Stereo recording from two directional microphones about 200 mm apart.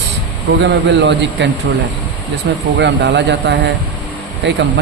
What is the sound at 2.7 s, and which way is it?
Speech, 60° right (ahead or behind).